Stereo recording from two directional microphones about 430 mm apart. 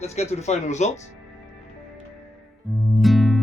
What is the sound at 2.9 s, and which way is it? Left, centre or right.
Music, centre.